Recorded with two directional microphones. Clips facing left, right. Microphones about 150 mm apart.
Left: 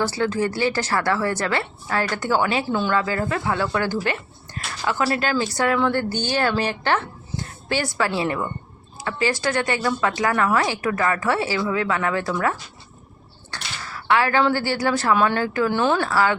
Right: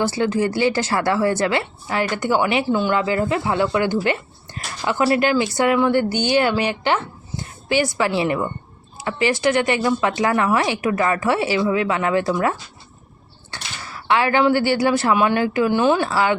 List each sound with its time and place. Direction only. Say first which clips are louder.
0.0 s speech: right 3 dB; 20° right (ahead or behind)